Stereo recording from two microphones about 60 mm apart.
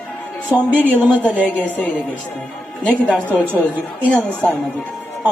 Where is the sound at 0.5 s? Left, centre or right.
Right.